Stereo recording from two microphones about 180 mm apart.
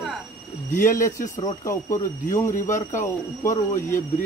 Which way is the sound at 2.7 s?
45° left (ahead or behind).